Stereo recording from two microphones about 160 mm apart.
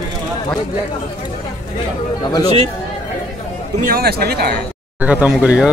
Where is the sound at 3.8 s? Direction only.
75° right (ahead or behind).